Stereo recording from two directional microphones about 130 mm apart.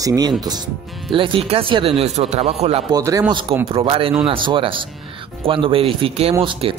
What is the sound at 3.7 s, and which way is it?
A man's voice, 45° right (ahead or behind).